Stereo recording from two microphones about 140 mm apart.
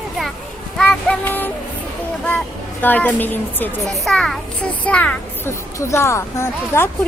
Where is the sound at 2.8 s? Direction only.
15° left (ahead or behind).